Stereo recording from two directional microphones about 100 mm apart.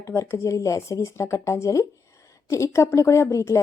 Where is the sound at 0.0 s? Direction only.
30° left (ahead or behind).